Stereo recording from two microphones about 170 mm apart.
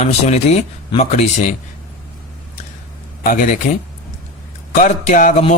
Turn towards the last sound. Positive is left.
turn(degrees=45)  # may be behind; listen again after turning